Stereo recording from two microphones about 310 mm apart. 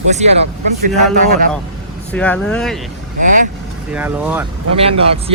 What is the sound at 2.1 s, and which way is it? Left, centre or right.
Speech, centre.